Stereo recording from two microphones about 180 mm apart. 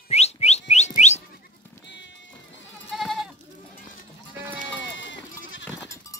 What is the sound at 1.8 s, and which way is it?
Music, 90° left.